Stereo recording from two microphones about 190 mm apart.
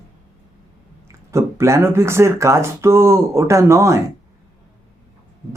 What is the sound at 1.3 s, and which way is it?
Speech, 15° right (ahead or behind).